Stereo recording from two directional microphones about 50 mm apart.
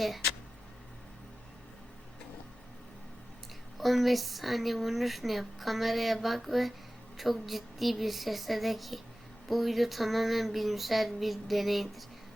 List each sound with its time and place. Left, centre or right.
3.8 s speech: centre